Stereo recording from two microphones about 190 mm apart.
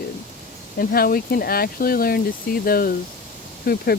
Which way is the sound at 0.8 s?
50° left (ahead or behind).